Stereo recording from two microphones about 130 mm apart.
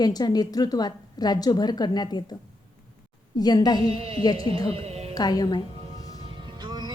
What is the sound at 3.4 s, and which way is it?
Speech, 30° left (ahead or behind).